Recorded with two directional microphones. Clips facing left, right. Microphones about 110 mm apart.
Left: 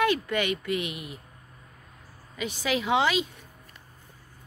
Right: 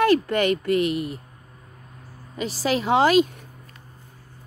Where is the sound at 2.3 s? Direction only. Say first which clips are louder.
Right 5 dB; 35° right (ahead or behind).